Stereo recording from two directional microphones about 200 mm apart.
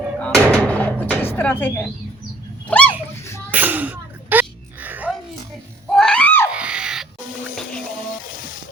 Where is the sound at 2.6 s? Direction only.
5° left (ahead or behind).